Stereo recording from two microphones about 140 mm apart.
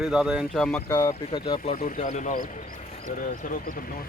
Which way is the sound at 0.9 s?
20° left (ahead or behind).